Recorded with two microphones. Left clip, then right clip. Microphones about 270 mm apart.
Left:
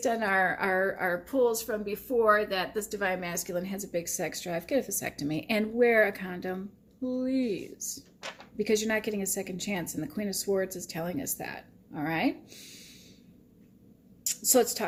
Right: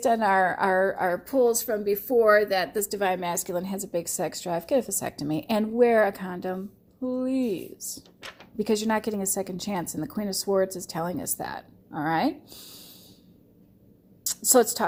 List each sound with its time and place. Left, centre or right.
0.0 s speech: right
14.3 s a woman's voice: right